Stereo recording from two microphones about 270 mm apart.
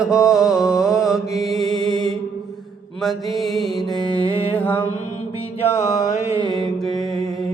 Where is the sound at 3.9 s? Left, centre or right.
Centre.